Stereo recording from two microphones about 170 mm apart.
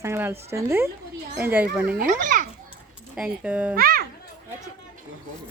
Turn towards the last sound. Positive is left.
turn(degrees=-60)  # may be behind; listen again after turning